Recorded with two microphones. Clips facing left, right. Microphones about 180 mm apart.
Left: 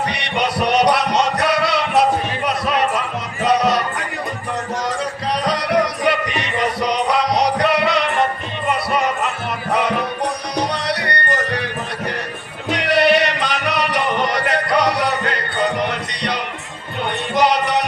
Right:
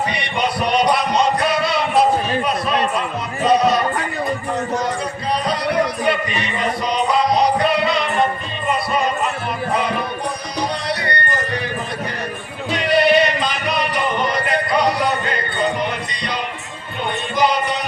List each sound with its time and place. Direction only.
0.1 s music: 70° left (ahead or behind)
3.4 s music: 80° left
5.5 s music: 85° left
12.7 s music: 70° left (ahead or behind)